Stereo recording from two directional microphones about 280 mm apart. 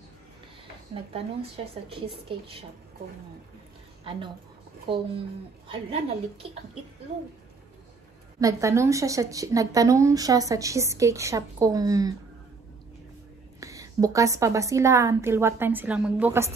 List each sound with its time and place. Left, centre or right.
1.9 s a woman's voice: centre
4.0 s a woman's voice: centre
8.4 s a woman's voice: centre
13.6 s a woman's voice: centre